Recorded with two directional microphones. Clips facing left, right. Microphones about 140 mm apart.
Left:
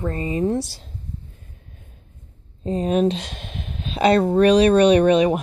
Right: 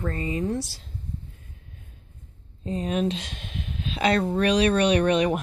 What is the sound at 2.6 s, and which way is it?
Speech, 35° left (ahead or behind).